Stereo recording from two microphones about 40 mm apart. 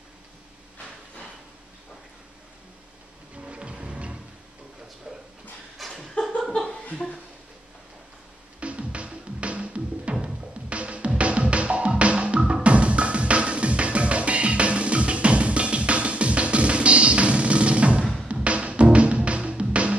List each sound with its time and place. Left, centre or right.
3.3 s music: right
5.8 s a sound: centre
8.5 s music: right